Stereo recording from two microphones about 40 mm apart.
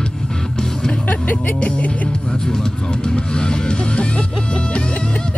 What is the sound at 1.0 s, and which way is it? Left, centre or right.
Music, left.